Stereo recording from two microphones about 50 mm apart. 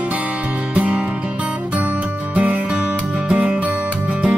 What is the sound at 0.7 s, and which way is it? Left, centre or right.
Music, right.